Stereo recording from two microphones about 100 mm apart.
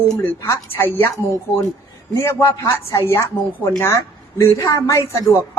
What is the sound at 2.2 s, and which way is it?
A woman's voice, 30° left (ahead or behind).